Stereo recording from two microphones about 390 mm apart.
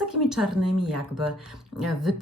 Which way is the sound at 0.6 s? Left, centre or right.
Right.